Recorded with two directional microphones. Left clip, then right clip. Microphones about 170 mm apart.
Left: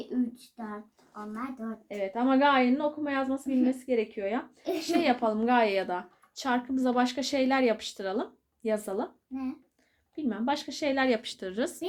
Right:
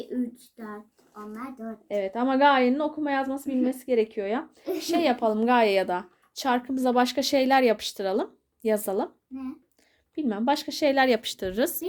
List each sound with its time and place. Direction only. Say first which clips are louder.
0.1 s a sound: even; 5° left (ahead or behind)
1.9 s a woman's voice: right 2 dB; 70° right (ahead or behind)
10.2 s a woman's voice: right 5 dB; 65° right (ahead or behind)